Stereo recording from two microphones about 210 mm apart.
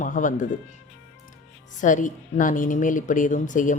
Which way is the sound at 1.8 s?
35° left (ahead or behind).